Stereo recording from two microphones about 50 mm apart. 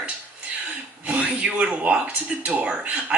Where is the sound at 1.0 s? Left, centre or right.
Right.